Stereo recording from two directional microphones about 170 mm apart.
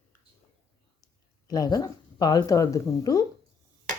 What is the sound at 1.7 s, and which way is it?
Speech, 20° left (ahead or behind).